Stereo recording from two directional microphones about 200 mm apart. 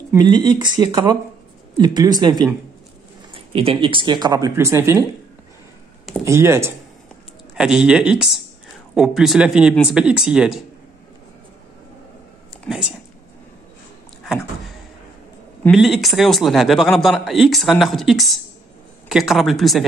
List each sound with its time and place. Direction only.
0.1 s speech: 20° right (ahead or behind)
6.2 s a man's voice: 15° right (ahead or behind)
12.6 s speech: 5° right (ahead or behind)
14.2 s a sound: centre (ahead or behind)
15.6 s a man's voice: centre (ahead or behind)